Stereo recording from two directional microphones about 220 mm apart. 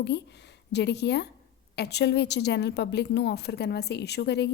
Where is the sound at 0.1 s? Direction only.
50° left (ahead or behind).